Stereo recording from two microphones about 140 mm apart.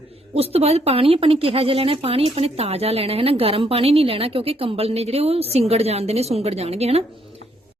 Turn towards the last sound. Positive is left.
turn(degrees=-45)  # may be behind; listen again after turning